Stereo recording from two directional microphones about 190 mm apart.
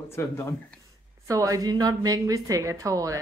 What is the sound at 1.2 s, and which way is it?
Speech, 15° right (ahead or behind).